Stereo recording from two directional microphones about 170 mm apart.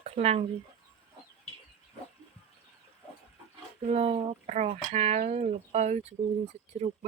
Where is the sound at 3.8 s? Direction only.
35° right (ahead or behind).